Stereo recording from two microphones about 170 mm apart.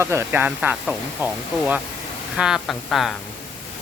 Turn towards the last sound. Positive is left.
turn(degrees=0)  # may be behind; listen again after turning